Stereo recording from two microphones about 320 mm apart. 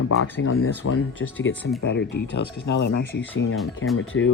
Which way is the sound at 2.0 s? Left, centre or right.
Left.